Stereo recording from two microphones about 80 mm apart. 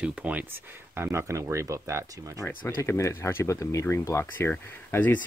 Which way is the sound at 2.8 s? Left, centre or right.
Left.